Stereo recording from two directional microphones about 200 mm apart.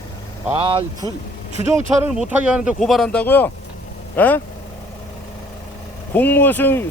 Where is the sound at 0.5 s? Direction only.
25° right (ahead or behind).